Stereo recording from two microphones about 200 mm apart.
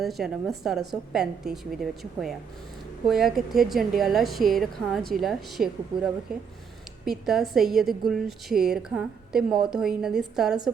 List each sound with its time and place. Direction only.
0.0 s a woman's voice: centre (ahead or behind)